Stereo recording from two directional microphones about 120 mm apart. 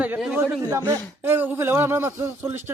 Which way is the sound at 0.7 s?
20° right (ahead or behind).